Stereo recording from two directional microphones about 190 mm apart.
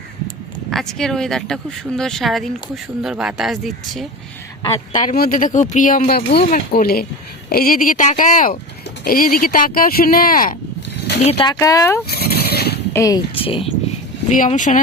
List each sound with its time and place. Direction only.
0.7 s speech: centre (ahead or behind)
4.9 s speech: 40° left (ahead or behind)
11.2 s speech: 30° left (ahead or behind)
11.6 s speech: 15° left (ahead or behind)
12.0 s horse: 55° left (ahead or behind)
12.9 s speech: 15° left (ahead or behind)
13.4 s speech: 30° left (ahead or behind)
14.3 s speech: 40° left (ahead or behind)